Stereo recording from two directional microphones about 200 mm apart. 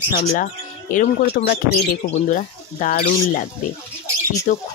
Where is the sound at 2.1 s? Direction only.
40° left (ahead or behind).